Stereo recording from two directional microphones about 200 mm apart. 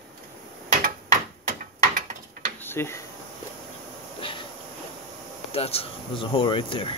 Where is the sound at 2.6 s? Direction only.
10° left (ahead or behind).